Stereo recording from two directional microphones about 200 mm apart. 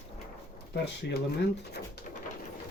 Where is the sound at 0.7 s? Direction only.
55° left (ahead or behind).